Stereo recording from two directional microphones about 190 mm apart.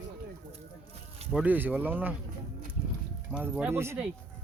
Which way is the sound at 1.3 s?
10° right (ahead or behind).